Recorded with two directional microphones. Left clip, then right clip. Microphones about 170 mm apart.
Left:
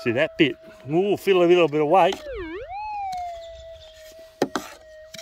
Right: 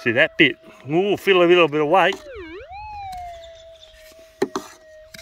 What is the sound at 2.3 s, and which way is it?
Police car, 20° left (ahead or behind).